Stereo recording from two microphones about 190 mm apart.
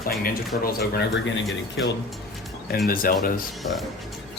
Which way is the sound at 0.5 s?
50° left (ahead or behind).